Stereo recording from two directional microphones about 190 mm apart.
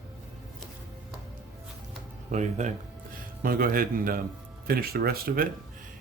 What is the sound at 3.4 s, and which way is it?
Speech, 50° right (ahead or behind).